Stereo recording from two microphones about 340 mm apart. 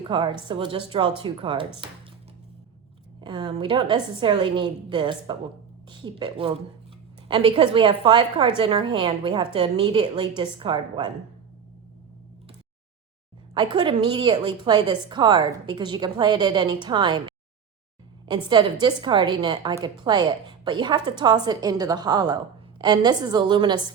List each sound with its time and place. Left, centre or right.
0.1 s a woman's voice: centre
3.2 s a woman's voice: centre
13.5 s a woman's voice: centre